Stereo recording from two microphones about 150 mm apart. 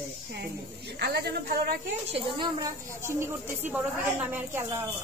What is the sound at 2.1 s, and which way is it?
Speech, 30° right (ahead or behind).